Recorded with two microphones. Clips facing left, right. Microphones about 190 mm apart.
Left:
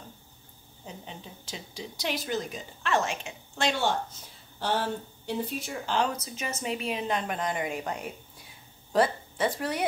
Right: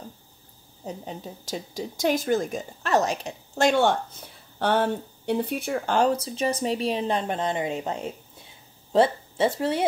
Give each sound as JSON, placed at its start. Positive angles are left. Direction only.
{"t": 0.8, "sound": "a woman's voice", "side_deg": -40}
{"t": 6.0, "sound": "a woman's voice", "side_deg": -30}